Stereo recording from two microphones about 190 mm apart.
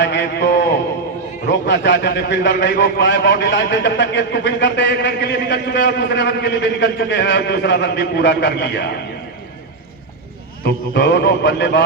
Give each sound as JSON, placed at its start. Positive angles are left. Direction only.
{"t": 0.0, "sound": "a man's voice", "side_deg": 65}
{"t": 10.6, "sound": "a man's voice", "side_deg": 65}